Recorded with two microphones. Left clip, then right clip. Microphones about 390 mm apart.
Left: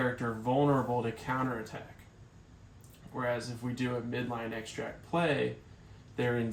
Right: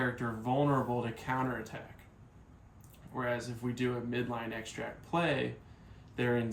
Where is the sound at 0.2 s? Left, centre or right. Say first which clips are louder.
Left 2 dB; centre.